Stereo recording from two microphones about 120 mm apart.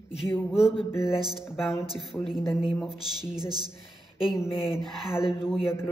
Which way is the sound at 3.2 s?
35° right (ahead or behind).